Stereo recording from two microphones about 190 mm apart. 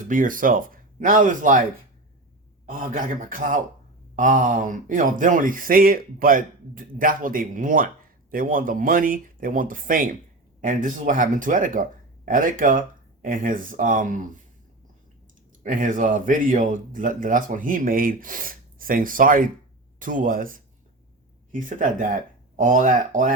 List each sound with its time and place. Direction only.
0.1 s speech: 45° right (ahead or behind)
2.6 s speech: 45° right (ahead or behind)
15.6 s speech: 45° right (ahead or behind)